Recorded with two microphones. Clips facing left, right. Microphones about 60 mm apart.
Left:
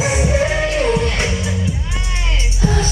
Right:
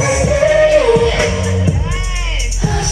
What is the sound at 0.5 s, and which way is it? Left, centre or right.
Music, right.